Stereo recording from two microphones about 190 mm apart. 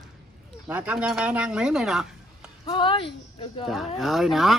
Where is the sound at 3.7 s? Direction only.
Centre (ahead or behind).